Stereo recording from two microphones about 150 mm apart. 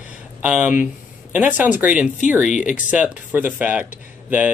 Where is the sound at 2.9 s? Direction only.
10° right (ahead or behind).